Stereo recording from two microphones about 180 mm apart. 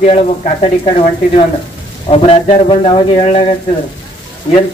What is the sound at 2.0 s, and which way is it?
Speech, 30° left (ahead or behind).